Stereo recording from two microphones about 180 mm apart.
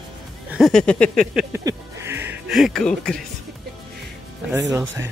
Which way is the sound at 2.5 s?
Centre (ahead or behind).